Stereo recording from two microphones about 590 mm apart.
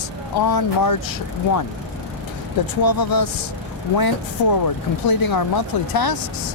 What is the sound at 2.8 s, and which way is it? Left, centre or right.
Speech, left.